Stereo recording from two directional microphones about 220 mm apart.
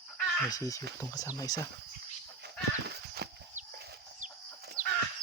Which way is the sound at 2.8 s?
45° right (ahead or behind).